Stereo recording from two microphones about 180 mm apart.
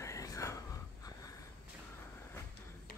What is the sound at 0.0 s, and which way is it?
Whispering, 15° left (ahead or behind).